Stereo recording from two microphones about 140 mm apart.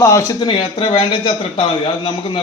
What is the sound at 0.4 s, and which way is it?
A man's voice, 40° left (ahead or behind).